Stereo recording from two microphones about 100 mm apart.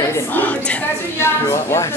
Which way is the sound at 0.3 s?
15° left (ahead or behind).